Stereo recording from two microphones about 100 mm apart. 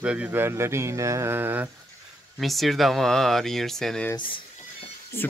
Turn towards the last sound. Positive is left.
turn(degrees=25)  # may be behind; listen again after turning